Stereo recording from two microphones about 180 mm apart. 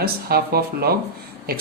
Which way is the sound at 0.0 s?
60° right (ahead or behind).